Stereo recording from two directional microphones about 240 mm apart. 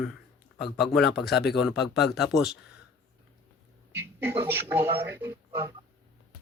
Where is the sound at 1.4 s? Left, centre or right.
Left.